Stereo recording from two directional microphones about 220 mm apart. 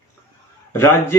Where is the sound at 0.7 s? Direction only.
10° left (ahead or behind).